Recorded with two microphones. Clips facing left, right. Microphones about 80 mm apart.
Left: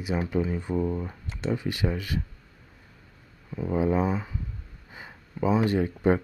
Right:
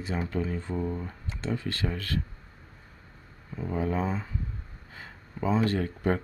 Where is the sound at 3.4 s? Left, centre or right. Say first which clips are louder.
Left 5 dB; centre.